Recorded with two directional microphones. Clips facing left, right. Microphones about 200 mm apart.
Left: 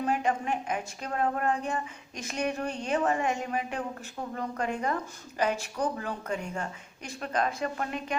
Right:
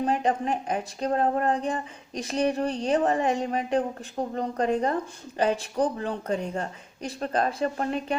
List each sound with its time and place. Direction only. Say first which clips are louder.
0.0 s speech: right 3 dB; 35° right (ahead or behind)